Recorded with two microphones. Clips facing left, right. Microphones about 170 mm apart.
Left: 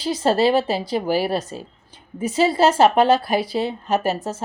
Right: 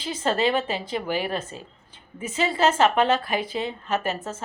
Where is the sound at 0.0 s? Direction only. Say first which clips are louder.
Left 6 dB; 40° left (ahead or behind).